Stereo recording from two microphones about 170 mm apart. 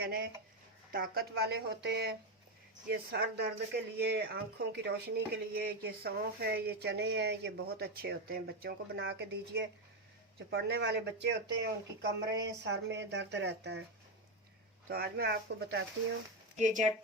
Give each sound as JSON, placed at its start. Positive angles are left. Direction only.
{"t": 0.0, "sound": "speech", "side_deg": -60}
{"t": 2.9, "sound": "speech", "side_deg": -75}
{"t": 14.8, "sound": "speech", "side_deg": -65}
{"t": 16.6, "sound": "speech", "side_deg": -45}